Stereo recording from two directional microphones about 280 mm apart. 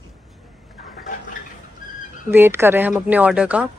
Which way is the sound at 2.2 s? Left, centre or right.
Centre.